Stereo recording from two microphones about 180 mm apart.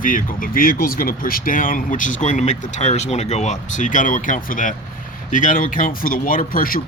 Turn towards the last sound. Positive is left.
turn(degrees=50)  # may be behind; listen again after turning